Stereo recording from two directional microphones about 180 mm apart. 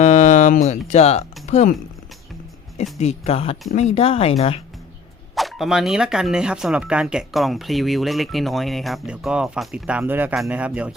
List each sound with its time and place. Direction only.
0.0 s a sound: 40° left (ahead or behind)
0.9 s speech: 35° left (ahead or behind)
3.0 s speech: 35° left (ahead or behind)
5.3 s speech: centre (ahead or behind)